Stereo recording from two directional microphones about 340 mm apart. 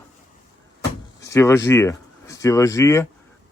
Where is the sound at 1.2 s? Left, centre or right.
Centre.